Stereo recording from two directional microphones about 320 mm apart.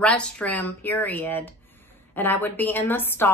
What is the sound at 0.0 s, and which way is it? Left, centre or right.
A woman's voice, centre.